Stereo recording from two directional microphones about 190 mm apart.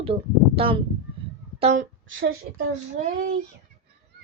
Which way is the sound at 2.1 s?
90° right.